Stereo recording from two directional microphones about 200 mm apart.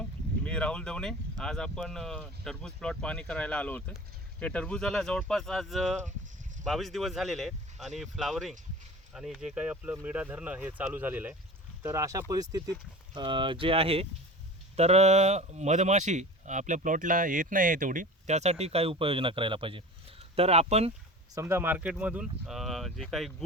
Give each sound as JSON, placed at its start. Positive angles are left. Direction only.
{"t": 0.4, "sound": "speech", "side_deg": 5}
{"t": 21.3, "sound": "speech", "side_deg": -10}